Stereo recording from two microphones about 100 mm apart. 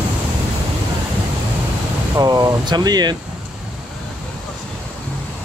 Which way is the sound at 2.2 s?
40° right (ahead or behind).